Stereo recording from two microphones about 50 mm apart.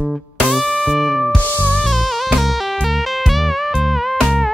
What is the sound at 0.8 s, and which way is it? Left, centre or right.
Music, centre.